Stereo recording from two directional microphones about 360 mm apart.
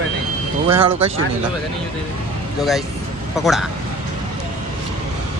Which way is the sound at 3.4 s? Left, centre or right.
Centre.